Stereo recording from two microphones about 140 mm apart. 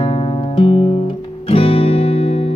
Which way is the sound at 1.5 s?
45° left (ahead or behind).